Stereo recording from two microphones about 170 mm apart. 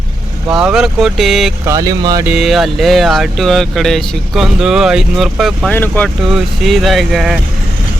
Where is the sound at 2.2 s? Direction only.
5° right (ahead or behind).